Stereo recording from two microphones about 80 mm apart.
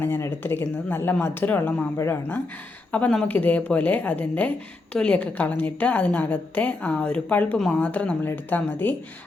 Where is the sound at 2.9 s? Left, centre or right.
Centre.